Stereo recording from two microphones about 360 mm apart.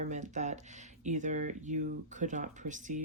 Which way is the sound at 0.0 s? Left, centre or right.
Centre.